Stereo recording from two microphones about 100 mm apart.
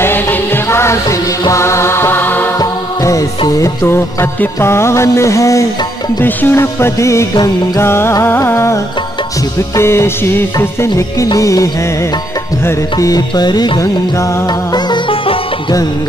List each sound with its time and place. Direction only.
0.0 s music: 20° left (ahead or behind)
2.6 s music: 35° left (ahead or behind)
7.8 s music: 25° left (ahead or behind)
13.3 s music: 45° left (ahead or behind)